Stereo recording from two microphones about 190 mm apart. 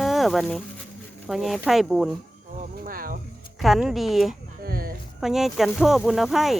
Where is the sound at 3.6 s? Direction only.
Centre (ahead or behind).